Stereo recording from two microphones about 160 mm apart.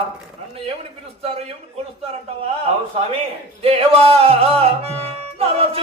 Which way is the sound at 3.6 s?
40° right (ahead or behind).